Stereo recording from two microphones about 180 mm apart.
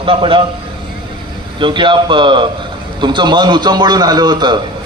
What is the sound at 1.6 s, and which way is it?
A man's voice, 25° right (ahead or behind).